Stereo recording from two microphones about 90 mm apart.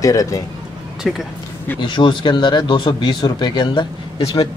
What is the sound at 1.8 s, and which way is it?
Speech, 65° left (ahead or behind).